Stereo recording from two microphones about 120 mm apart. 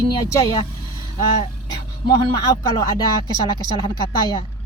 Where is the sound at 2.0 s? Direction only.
35° left (ahead or behind).